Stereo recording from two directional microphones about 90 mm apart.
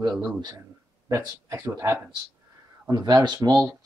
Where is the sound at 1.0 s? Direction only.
35° right (ahead or behind).